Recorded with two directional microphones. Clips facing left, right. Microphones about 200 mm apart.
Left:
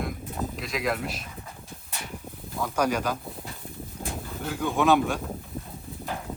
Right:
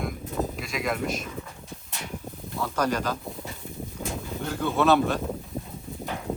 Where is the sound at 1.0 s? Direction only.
45° right (ahead or behind).